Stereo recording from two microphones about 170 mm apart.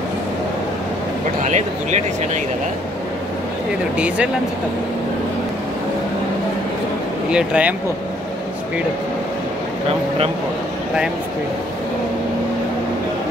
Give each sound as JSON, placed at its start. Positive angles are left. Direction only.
{"t": 1.4, "sound": "speech", "side_deg": -45}
{"t": 7.2, "sound": "speech", "side_deg": -5}
{"t": 9.8, "sound": "speech", "side_deg": -35}